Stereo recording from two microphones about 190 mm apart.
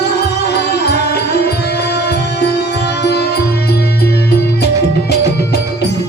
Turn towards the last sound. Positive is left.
turn(degrees=60)  # may be behind; listen again after turning